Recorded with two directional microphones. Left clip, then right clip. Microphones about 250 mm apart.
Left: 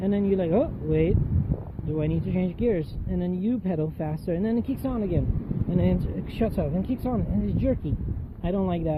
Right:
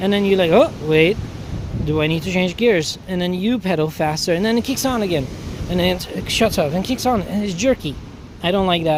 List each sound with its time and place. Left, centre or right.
0.0 s speech: centre